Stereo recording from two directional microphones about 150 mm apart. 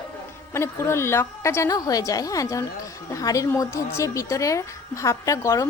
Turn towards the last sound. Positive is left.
turn(degrees=20)  # may be behind; listen again after turning